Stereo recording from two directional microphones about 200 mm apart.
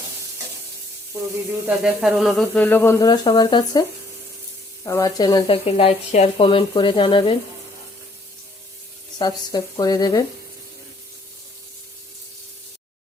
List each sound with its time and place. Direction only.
1.6 s speech: 5° right (ahead or behind); by 3.8 s 20° left (ahead or behind)
4.9 s speech: 15° left (ahead or behind)
9.1 s speech: 20° left (ahead or behind)